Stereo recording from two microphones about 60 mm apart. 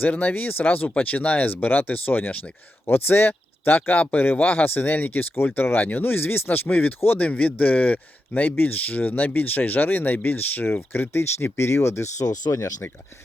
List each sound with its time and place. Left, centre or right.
0.1 s speech: left
3.8 s speech: left
12.2 s speech: left